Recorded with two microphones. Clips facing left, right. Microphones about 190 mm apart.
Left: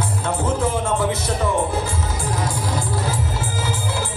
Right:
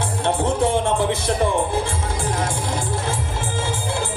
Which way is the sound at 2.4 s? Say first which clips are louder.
Even; 25° right (ahead or behind).